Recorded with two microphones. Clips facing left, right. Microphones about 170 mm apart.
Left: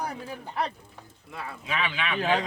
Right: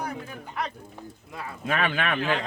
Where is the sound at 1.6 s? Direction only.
50° right (ahead or behind).